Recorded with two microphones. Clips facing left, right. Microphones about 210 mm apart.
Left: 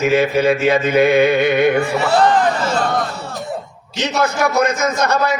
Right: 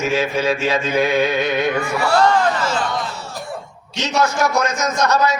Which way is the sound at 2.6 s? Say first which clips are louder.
Left 3 dB; 60° left (ahead or behind).